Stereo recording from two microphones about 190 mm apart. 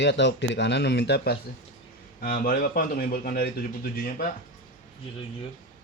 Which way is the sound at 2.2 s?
50° left (ahead or behind).